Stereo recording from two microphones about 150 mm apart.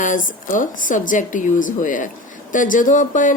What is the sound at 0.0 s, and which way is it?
Speech, 60° left (ahead or behind).